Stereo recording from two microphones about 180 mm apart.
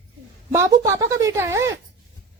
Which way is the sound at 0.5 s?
15° right (ahead or behind).